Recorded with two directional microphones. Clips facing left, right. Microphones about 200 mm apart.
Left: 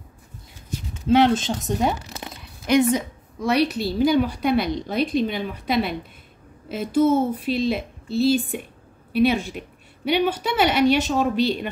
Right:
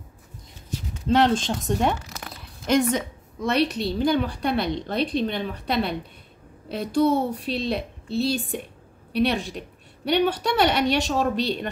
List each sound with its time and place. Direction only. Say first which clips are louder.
1.0 s a woman's voice: left 3 dB; 5° left (ahead or behind)
2.0 s crumpling: left 3 dB; 25° left (ahead or behind)
2.6 s a woman's voice: left 3 dB; centre (ahead or behind)